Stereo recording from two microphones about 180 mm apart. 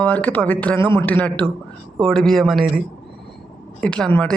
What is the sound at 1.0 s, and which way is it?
Speech, 10° left (ahead or behind).